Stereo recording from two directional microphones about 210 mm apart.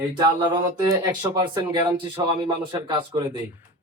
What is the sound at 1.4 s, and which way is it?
Speech, 20° right (ahead or behind).